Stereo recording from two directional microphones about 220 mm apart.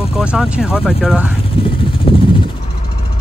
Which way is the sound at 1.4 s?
25° left (ahead or behind).